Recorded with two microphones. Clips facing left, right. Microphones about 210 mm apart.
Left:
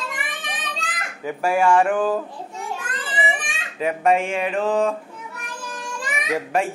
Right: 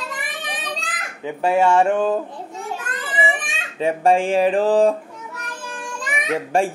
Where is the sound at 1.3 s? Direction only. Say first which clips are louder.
Right 1 dB; 20° right (ahead or behind).